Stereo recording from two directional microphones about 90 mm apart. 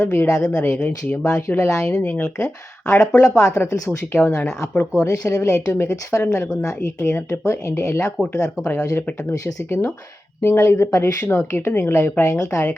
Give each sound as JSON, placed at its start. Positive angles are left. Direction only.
{"t": 0.0, "sound": "a woman's voice", "side_deg": 30}
{"t": 2.8, "sound": "a woman's voice", "side_deg": 35}